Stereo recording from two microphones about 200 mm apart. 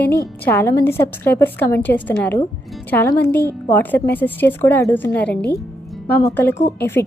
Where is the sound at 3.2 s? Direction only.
55° left (ahead or behind).